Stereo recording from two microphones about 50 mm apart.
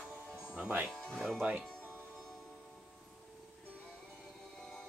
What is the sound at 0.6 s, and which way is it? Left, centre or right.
Speech, right.